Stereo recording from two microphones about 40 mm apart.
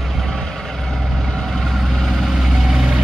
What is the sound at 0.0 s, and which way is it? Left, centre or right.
Vehicle, centre.